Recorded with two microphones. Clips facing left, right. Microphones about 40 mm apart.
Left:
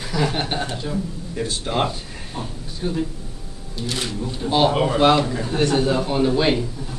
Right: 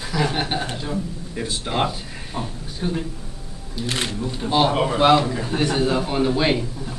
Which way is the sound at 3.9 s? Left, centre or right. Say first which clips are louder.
Right 1 dB; right.